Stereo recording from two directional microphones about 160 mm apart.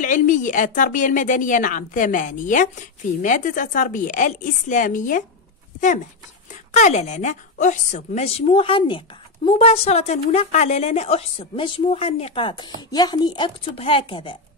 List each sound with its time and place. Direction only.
0.0 s a woman's voice: 55° left (ahead or behind)
6.7 s a woman's voice: 45° left (ahead or behind); by 14.4 s 30° left (ahead or behind)